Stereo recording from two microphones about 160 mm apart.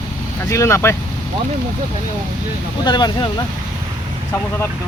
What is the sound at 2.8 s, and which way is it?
Speech, 30° left (ahead or behind).